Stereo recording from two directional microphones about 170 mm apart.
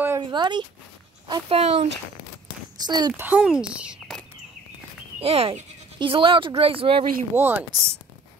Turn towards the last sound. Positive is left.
turn(degrees=-10)  # may be behind; listen again after turning